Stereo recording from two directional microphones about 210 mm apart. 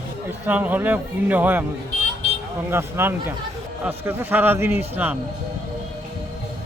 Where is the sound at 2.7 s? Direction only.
10° right (ahead or behind).